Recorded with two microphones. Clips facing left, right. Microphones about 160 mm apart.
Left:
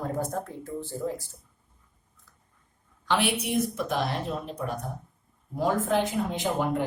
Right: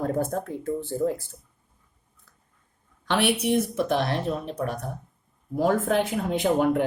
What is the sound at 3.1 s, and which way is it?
Speech, 65° right (ahead or behind).